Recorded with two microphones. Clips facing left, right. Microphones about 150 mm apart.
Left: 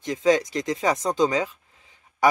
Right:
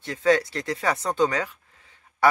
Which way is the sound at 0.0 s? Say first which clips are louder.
Left 1 dB; 15° left (ahead or behind).